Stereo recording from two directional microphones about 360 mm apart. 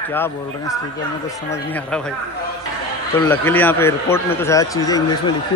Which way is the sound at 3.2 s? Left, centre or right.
Centre.